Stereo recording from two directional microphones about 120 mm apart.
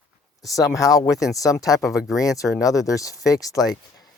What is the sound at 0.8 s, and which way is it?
Speech, 30° left (ahead or behind).